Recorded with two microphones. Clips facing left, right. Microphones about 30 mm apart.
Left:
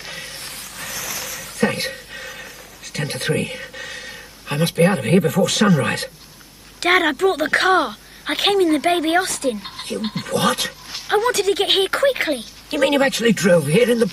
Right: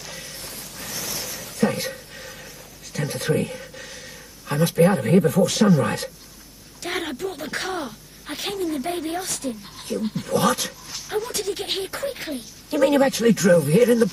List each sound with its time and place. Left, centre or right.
0.0 s a sound: left
4.5 s a man's voice: left
6.8 s speech: left
13.6 s speech: left